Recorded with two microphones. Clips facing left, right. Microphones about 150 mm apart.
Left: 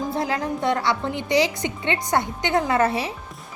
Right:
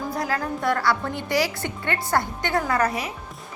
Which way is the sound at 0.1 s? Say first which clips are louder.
Left 2 dB; 25° left (ahead or behind).